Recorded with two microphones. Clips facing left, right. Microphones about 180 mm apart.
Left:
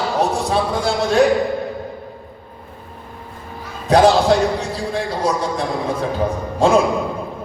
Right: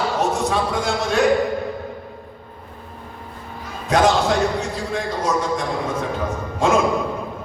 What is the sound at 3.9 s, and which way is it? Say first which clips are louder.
Basketball bounce: left 5 dB; 35° left (ahead or behind).